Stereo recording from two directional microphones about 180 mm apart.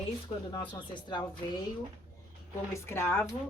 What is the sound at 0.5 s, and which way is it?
Speech, 25° left (ahead or behind).